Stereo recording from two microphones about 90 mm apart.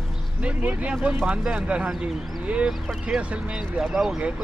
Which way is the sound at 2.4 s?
15° right (ahead or behind).